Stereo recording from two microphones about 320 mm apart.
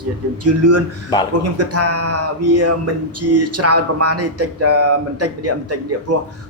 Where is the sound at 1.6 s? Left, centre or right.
Right.